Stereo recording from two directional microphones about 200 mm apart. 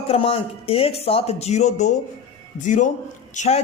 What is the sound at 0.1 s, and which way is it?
A woman's voice, 30° left (ahead or behind).